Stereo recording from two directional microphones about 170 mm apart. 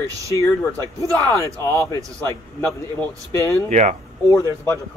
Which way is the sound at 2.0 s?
20° right (ahead or behind).